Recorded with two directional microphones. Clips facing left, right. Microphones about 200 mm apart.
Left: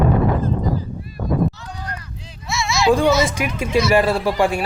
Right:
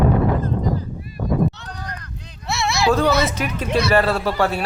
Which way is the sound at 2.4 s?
65° right (ahead or behind).